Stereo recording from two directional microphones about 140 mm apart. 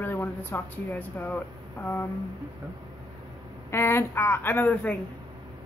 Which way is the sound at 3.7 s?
15° left (ahead or behind).